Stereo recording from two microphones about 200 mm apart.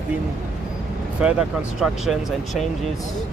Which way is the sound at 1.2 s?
5° right (ahead or behind).